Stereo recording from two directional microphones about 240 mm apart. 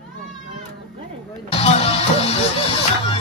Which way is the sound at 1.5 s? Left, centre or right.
Left.